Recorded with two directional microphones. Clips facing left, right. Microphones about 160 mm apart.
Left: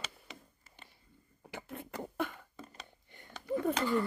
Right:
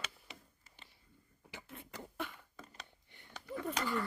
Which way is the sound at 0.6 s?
50° left (ahead or behind).